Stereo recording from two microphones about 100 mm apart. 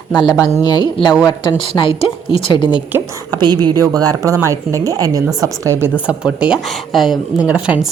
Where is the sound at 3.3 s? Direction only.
45° right (ahead or behind); by 5.9 s 30° right (ahead or behind).